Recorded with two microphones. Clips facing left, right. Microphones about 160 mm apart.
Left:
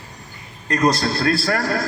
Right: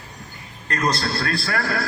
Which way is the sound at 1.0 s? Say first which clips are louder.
Left 5 dB; 40° left (ahead or behind).